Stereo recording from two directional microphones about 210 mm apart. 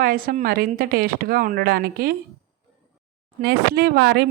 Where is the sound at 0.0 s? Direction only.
45° right (ahead or behind).